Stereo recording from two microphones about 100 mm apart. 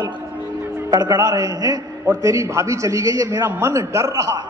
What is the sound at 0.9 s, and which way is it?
A man's voice, 40° right (ahead or behind).